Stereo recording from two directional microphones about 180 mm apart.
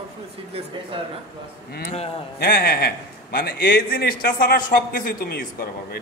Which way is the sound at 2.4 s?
65° left (ahead or behind).